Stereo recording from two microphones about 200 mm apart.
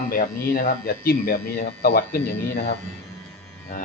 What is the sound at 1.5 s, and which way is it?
Speech, 55° left (ahead or behind).